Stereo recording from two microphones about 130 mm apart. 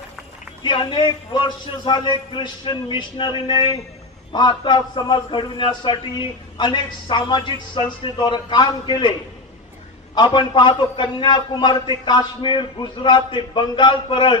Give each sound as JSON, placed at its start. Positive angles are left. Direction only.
{"t": 0.6, "sound": "a man's voice", "side_deg": 35}
{"t": 10.1, "sound": "a man's voice", "side_deg": 35}